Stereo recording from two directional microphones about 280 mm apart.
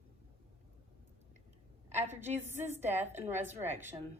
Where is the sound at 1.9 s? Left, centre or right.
Right.